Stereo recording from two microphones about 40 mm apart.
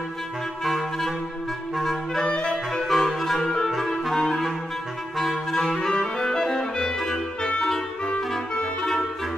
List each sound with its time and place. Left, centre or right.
0.7 s clarinet: centre
1.8 s music: centre
2.3 s clarinet: centre
2.9 s music: centre
3.7 s clarinet: centre
5.8 s music: centre